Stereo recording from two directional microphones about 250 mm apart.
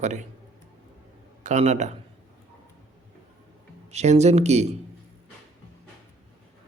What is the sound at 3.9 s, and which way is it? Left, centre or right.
Speech, right.